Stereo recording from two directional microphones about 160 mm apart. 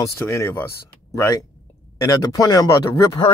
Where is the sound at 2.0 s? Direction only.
20° left (ahead or behind).